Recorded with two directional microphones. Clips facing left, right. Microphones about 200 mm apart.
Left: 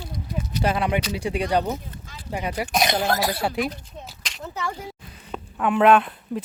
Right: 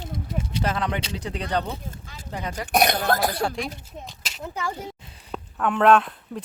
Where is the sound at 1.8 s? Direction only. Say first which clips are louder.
Right 1 dB; 45° right (ahead or behind).